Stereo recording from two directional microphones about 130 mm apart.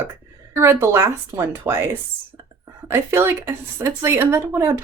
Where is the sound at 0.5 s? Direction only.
20° right (ahead or behind).